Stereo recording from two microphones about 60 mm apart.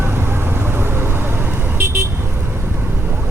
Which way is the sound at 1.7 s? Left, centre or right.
Right.